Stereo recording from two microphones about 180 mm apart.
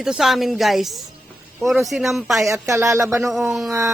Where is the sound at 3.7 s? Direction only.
15° right (ahead or behind).